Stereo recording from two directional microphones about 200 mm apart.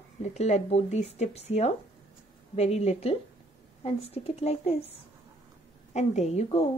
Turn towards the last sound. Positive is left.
turn(degrees=30)  # may be behind; listen again after turning